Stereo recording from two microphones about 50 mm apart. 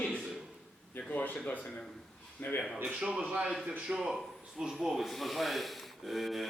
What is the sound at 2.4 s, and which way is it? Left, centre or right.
Speech, left.